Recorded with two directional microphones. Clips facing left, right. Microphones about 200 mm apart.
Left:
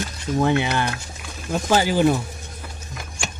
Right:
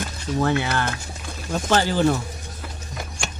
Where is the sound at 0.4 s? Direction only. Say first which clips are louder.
Left 2 dB; 15° left (ahead or behind).